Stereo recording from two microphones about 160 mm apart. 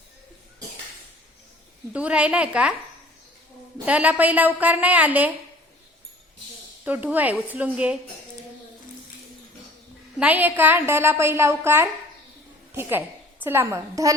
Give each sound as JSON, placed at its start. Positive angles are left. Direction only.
{"t": 1.9, "sound": "a woman's voice", "side_deg": -5}
{"t": 3.8, "sound": "a woman's voice", "side_deg": -10}
{"t": 6.8, "sound": "a woman's voice", "side_deg": -10}
{"t": 10.2, "sound": "a woman's voice", "side_deg": -10}